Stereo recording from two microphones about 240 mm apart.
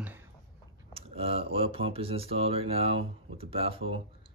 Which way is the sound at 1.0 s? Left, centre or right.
Right.